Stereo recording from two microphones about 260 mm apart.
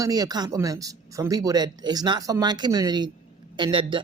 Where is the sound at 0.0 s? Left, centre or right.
Centre.